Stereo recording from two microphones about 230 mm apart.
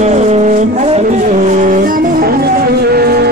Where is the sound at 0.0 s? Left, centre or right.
Right.